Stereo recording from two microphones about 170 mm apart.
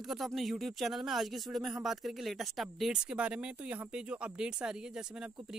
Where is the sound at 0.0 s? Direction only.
Centre (ahead or behind).